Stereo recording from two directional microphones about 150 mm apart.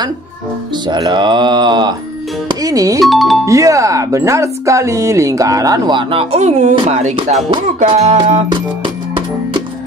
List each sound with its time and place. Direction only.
0.8 s speech: 30° right (ahead or behind)
3.0 s speech: centre (ahead or behind)
3.4 s speech: 20° right (ahead or behind); by 7.2 s 50° right (ahead or behind)
7.8 s music: 50° right (ahead or behind)